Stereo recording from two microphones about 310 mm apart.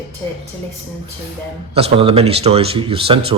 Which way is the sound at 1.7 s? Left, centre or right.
Centre.